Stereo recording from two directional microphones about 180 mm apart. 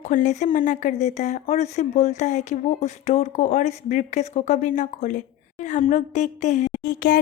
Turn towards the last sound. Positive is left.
turn(degrees=55)  # may be behind; listen again after turning